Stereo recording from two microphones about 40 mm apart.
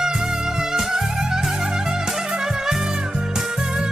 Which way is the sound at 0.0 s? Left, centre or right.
Centre.